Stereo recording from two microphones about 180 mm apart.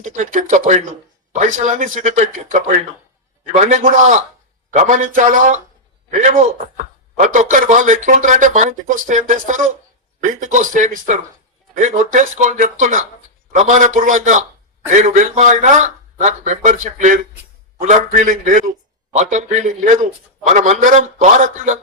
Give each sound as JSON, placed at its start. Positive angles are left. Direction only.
{"t": 0.0, "sound": "speech", "side_deg": -45}